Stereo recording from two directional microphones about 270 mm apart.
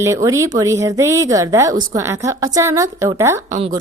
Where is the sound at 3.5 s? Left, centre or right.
Right.